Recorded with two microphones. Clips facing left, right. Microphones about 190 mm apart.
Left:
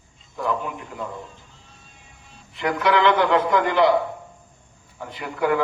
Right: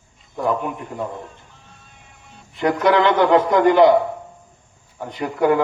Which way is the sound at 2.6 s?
40° right (ahead or behind).